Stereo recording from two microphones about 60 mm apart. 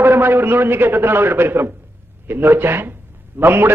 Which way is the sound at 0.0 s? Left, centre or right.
Right.